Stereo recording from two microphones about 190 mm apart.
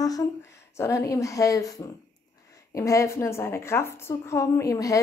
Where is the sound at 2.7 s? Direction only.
15° left (ahead or behind).